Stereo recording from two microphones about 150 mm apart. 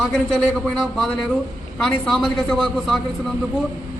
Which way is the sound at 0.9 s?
5° left (ahead or behind).